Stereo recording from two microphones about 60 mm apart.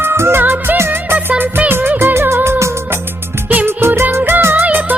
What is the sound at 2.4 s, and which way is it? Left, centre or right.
Music, right.